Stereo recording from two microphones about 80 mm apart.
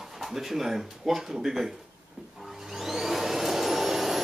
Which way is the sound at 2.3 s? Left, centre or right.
Centre.